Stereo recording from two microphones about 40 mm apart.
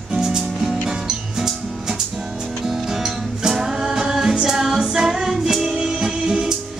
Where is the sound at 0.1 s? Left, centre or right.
Centre.